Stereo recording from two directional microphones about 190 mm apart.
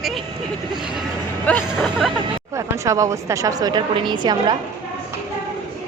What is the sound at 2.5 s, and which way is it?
A woman's voice, 15° right (ahead or behind).